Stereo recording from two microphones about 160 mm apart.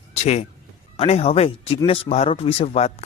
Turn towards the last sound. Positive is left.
turn(degrees=40)  # may be behind; listen again after turning